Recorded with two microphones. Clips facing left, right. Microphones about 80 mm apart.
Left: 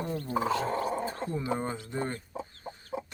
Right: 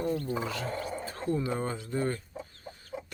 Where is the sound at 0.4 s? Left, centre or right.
Left.